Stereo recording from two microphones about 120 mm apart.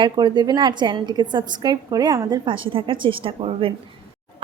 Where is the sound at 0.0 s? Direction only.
40° right (ahead or behind).